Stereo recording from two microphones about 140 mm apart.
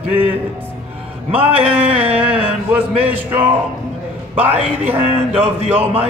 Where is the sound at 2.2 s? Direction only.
10° right (ahead or behind).